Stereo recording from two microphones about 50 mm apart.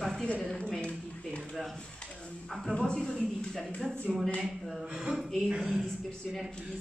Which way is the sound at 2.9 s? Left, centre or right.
Centre.